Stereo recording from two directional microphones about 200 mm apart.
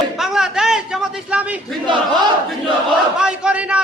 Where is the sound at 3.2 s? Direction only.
5° right (ahead or behind).